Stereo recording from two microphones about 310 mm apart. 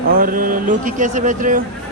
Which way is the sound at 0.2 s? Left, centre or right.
Right.